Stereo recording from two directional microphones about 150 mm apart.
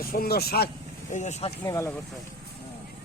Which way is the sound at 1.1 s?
50° left (ahead or behind).